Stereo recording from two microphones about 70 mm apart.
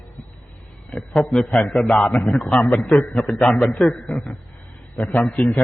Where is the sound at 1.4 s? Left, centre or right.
Centre.